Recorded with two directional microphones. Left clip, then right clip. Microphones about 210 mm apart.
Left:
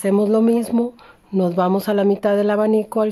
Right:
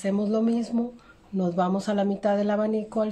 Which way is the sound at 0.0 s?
40° left (ahead or behind).